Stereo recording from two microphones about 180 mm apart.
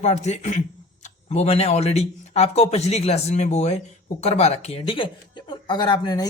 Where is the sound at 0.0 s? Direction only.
40° left (ahead or behind).